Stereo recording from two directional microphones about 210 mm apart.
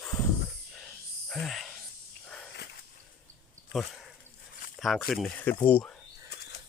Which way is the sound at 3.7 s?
Centre (ahead or behind).